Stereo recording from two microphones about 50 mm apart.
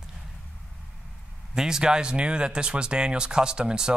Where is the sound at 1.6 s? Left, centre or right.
Centre.